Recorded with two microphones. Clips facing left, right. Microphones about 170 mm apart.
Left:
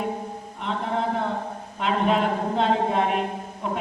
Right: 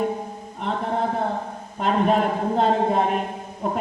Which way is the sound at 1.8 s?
45° right (ahead or behind).